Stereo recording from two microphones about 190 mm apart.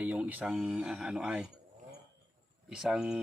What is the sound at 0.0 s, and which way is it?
Speech, 10° right (ahead or behind).